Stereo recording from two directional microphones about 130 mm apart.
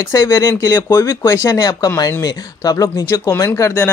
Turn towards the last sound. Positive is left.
turn(degrees=20)  # may be behind; listen again after turning